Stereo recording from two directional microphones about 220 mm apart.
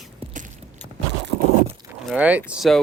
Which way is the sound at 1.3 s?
25° left (ahead or behind).